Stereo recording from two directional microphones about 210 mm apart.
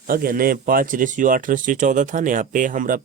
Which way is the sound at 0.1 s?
45° right (ahead or behind).